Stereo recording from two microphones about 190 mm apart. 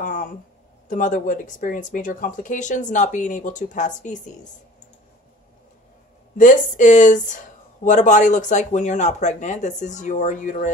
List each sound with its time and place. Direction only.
0.0 s a sound: 45° left (ahead or behind)
0.8 s speech: 40° left (ahead or behind)
6.3 s speech: 40° left (ahead or behind)